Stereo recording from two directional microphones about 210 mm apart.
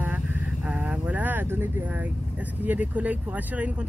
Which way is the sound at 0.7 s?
5° right (ahead or behind).